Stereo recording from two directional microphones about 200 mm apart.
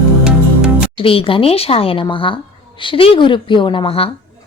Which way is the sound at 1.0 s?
25° left (ahead or behind).